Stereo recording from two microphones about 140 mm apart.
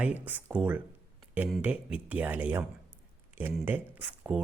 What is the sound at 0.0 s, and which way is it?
Speech, 10° right (ahead or behind).